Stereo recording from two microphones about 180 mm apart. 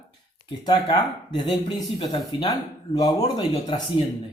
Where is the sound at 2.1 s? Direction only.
25° left (ahead or behind).